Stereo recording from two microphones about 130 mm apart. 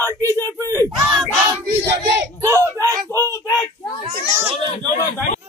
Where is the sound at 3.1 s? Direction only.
20° left (ahead or behind).